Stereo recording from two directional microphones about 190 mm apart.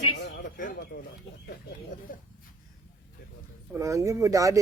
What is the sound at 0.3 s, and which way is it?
Bird, 50° left (ahead or behind).